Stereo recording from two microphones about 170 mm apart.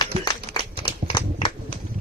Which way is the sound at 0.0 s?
25° left (ahead or behind).